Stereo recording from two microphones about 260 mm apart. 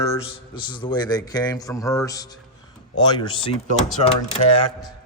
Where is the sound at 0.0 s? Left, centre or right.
Centre.